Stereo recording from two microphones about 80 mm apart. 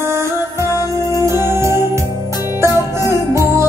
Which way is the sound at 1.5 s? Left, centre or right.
Right.